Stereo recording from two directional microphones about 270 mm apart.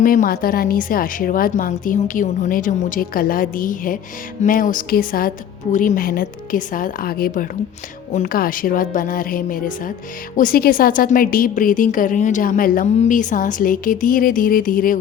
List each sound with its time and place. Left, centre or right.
0.0 s a woman's voice: left